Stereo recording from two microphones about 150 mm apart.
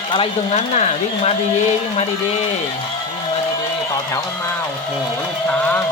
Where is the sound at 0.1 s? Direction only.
40° left (ahead or behind).